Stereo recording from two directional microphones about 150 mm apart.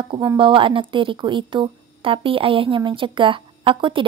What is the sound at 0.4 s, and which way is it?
A woman's voice, 35° right (ahead or behind).